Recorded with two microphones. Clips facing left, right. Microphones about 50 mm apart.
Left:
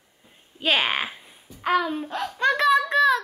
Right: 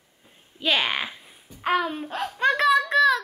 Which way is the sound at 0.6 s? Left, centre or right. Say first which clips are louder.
Left 1 dB; centre.